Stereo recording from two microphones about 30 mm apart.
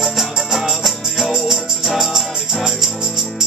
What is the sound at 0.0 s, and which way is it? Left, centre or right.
Music, centre.